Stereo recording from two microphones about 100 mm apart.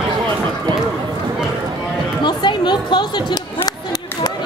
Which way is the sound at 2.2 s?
50° left (ahead or behind).